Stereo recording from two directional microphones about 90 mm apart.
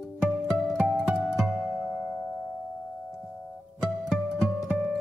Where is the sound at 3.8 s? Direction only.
5° right (ahead or behind).